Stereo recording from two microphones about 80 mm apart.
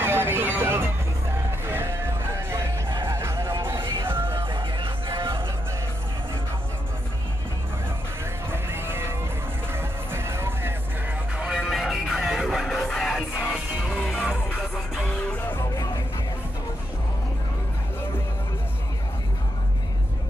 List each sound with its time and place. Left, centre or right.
0.0 s vehicle: right
1.7 s music: right
4.4 s music: right
8.5 s music: right
11.5 s music: centre
15.0 s music: left